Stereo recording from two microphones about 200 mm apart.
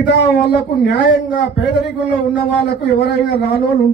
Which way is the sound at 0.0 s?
55° left (ahead or behind).